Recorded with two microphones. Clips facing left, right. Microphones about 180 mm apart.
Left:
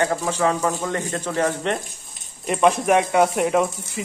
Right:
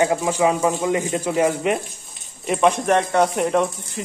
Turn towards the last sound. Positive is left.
turn(degrees=0)  # may be behind; listen again after turning